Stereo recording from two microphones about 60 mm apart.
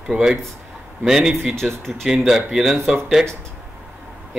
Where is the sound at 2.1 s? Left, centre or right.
Centre.